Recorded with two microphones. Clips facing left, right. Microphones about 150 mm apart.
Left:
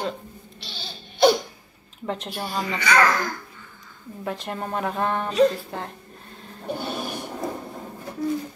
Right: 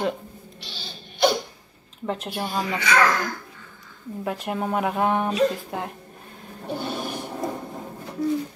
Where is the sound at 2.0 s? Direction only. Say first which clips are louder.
Right 2 dB; 5° right (ahead or behind).